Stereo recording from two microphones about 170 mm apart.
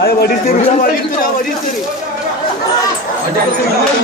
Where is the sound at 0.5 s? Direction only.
55° left (ahead or behind).